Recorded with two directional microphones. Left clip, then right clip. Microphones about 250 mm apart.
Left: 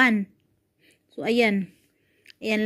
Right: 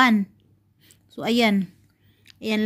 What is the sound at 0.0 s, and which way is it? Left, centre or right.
Speech, centre.